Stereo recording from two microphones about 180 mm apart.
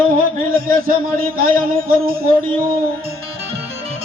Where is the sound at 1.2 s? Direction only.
55° right (ahead or behind).